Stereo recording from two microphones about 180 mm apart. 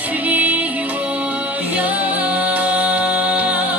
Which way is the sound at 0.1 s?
10° right (ahead or behind).